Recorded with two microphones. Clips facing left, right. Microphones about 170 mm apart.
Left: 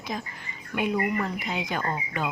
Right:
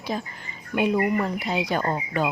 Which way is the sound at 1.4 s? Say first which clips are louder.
Right 5 dB; 35° right (ahead or behind).